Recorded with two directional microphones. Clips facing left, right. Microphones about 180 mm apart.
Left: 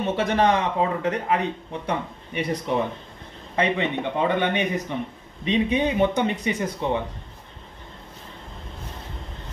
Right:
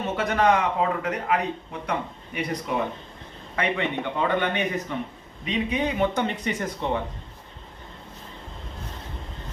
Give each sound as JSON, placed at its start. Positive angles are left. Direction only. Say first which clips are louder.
{"t": 0.1, "sound": "speech", "louder": "even", "side_deg": 25}
{"t": 3.5, "sound": "speech", "louder": "left 3 dB", "side_deg": 20}